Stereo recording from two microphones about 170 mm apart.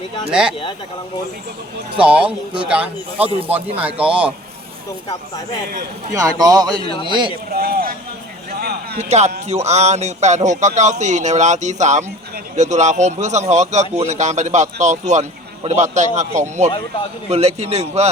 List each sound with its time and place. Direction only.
0.3 s speech: 5° right (ahead or behind)
2.0 s a man's voice: 5° right (ahead or behind)
6.1 s a man's voice: 20° right (ahead or behind)
6.7 s speech: 30° left (ahead or behind)
7.5 s speech: 60° right (ahead or behind)
8.4 s a sound: 65° right (ahead or behind)
9.0 s a man's voice: 40° right (ahead or behind)